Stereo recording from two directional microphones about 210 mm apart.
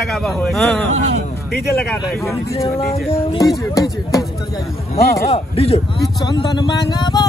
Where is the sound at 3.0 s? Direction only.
15° left (ahead or behind).